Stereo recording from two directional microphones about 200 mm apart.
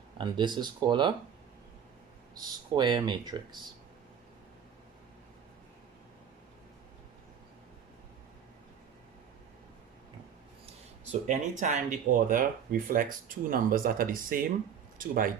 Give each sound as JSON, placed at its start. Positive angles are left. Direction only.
{"t": 0.2, "sound": "speech", "side_deg": -20}
{"t": 2.3, "sound": "speech", "side_deg": -20}
{"t": 11.3, "sound": "speech", "side_deg": -40}